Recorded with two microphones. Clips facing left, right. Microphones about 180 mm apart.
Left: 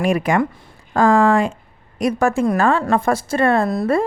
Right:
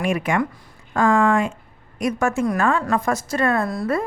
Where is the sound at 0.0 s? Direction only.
35° left (ahead or behind).